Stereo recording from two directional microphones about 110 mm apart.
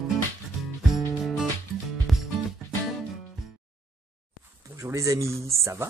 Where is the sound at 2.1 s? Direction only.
Centre (ahead or behind).